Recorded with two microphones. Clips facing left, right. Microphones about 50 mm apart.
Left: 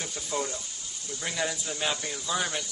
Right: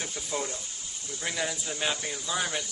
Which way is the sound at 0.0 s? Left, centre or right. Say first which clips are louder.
Left 1 dB; centre.